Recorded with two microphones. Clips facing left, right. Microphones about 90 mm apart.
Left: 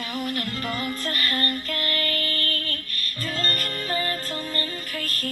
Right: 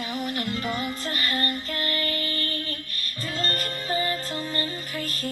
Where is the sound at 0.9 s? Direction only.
55° left (ahead or behind).